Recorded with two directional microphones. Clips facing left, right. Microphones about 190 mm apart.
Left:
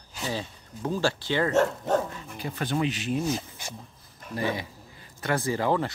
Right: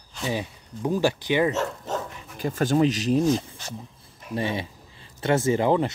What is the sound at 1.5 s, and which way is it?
Speech, 60° left (ahead or behind).